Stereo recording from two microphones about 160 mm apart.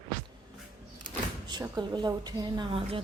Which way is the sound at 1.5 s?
25° right (ahead or behind).